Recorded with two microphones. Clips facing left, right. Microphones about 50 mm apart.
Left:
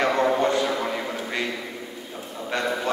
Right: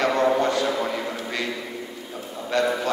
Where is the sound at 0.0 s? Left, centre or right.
Centre.